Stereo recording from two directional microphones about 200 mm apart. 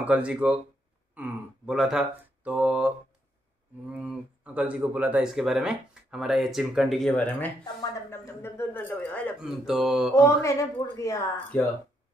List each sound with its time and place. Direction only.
0.0 s speech: 5° right (ahead or behind)
3.9 s speech: 5° right (ahead or behind)
9.4 s speech: 5° right (ahead or behind)
10.1 s speech: 15° left (ahead or behind)